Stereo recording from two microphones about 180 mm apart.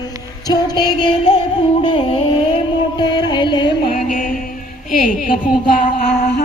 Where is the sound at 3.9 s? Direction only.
50° left (ahead or behind).